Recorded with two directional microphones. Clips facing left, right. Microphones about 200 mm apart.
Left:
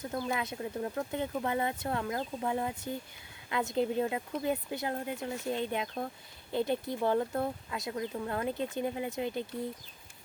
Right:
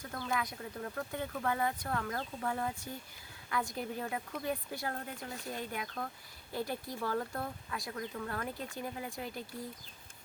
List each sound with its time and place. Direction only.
0.2 s speech: 20° left (ahead or behind)